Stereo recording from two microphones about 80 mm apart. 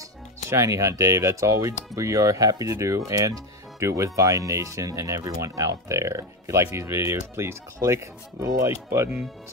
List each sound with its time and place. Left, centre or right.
0.5 s speech: right